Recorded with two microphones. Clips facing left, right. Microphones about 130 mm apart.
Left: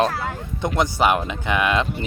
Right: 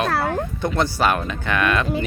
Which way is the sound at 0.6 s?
15° left (ahead or behind).